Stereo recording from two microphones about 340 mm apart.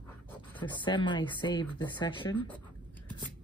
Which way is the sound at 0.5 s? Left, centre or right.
Centre.